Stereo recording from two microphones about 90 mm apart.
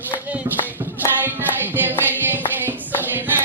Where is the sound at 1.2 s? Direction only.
20° right (ahead or behind).